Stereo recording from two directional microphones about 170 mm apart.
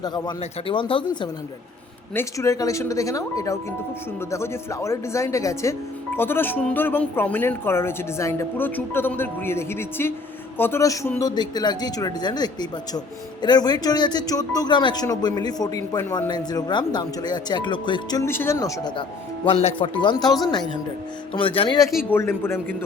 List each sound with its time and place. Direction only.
0.0 s speech: 25° left (ahead or behind)
2.1 s speech: 20° left (ahead or behind)
18.3 s speech: 15° left (ahead or behind)
19.5 s speech: 35° left (ahead or behind)
21.3 s speech: 30° left (ahead or behind)
22.1 s speech: 15° left (ahead or behind)